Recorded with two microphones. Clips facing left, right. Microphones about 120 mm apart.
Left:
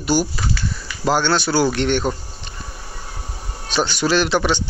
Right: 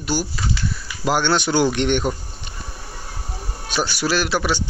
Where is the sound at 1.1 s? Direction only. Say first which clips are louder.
Left 1 dB; 15° right (ahead or behind).